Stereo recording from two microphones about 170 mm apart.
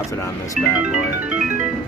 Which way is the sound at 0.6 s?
5° right (ahead or behind).